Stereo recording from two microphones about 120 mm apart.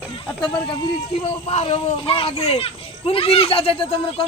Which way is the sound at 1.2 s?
60° left (ahead or behind).